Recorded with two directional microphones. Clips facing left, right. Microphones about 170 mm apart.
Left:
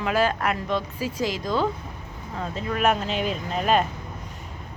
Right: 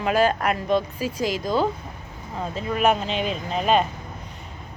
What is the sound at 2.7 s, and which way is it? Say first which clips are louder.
Speech: right 2 dB; centre (ahead or behind).